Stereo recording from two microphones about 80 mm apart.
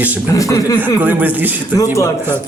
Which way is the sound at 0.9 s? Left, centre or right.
Right.